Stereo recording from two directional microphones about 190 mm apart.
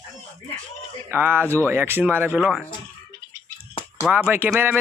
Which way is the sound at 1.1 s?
10° right (ahead or behind).